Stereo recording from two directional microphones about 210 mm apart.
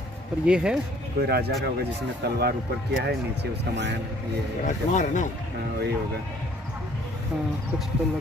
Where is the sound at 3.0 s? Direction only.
55° right (ahead or behind).